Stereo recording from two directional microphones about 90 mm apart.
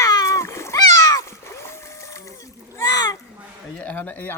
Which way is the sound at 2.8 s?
45° left (ahead or behind).